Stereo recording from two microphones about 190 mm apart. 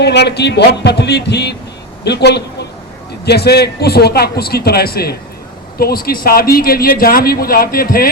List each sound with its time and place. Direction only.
0.0 s a man's voice: 60° left (ahead or behind)